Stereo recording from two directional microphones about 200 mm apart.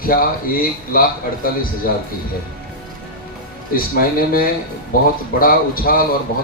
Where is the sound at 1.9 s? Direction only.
50° left (ahead or behind).